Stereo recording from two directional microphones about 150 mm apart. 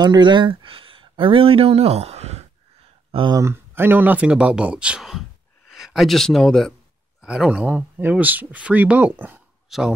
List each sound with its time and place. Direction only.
0.0 s speech: 30° right (ahead or behind); by 2.4 s 45° right (ahead or behind)
3.1 s speech: 35° right (ahead or behind)
3.3 s speech: 15° right (ahead or behind)